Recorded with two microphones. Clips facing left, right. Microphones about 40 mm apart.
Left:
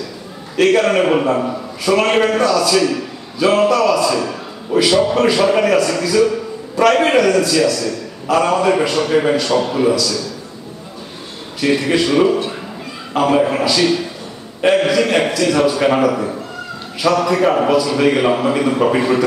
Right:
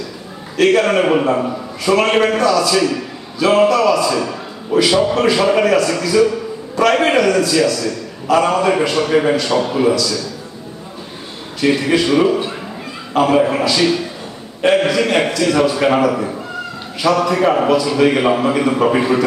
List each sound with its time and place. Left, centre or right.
0.6 s a man's voice: centre
11.6 s a man's voice: centre